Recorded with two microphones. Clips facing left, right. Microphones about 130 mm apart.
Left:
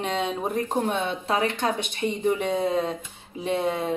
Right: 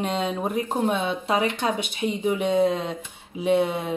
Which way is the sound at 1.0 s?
15° right (ahead or behind).